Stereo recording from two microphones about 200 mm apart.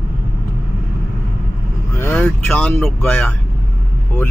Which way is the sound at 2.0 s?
10° left (ahead or behind).